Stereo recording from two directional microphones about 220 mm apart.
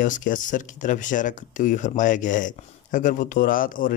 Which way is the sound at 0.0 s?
35° left (ahead or behind).